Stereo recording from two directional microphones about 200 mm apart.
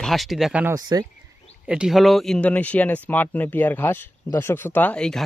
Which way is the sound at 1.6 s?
5° right (ahead or behind).